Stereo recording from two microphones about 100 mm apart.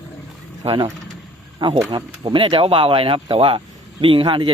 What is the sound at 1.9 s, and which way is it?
Speech, 50° right (ahead or behind).